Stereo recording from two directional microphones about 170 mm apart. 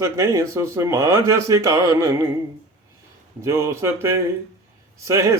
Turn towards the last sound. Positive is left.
turn(degrees=-20)  # may be behind; listen again after turning